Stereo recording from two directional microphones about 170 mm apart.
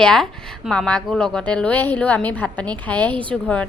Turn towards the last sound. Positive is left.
turn(degrees=5)  # may be behind; listen again after turning